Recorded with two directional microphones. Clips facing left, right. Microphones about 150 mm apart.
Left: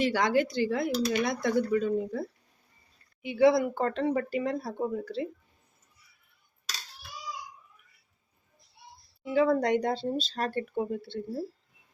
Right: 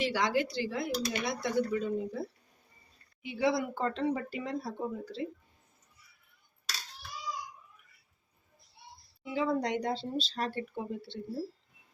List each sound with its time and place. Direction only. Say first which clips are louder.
0.0 s speech: left 4 dB; 50° left (ahead or behind)
3.2 s speech: left 8 dB; 55° left (ahead or behind)
9.3 s speech: left 6 dB; 55° left (ahead or behind)